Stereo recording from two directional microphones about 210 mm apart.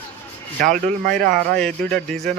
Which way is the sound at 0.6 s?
40° right (ahead or behind).